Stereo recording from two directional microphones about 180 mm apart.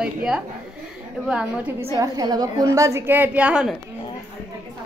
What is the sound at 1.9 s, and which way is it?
A woman's voice, 20° right (ahead or behind).